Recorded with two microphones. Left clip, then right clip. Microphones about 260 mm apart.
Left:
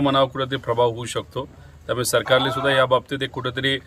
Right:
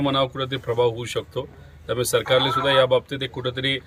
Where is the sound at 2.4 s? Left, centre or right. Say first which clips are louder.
Right 2 dB; left.